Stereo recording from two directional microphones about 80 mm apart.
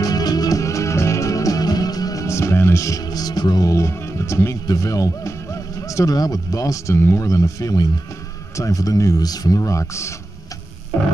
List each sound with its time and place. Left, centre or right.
0.0 s music: left
2.2 s music: left
3.7 s speech: left